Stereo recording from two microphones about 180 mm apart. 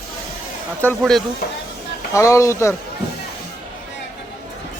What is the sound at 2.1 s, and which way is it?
Speech, 15° left (ahead or behind).